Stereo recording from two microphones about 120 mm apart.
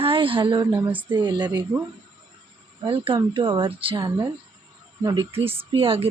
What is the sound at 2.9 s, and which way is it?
A woman's voice, 50° right (ahead or behind).